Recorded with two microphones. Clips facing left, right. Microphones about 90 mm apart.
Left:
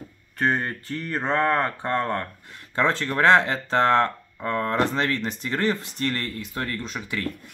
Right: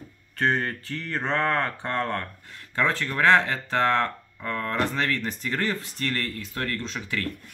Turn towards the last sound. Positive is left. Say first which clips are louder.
# left 1 dB
turn(degrees=10)  # may be behind; listen again after turning